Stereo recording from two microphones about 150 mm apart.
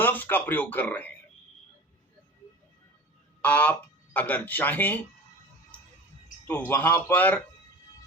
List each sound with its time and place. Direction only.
0.0 s speech: 10° left (ahead or behind)
3.4 s speech: 10° left (ahead or behind)
6.5 s speech: 15° left (ahead or behind)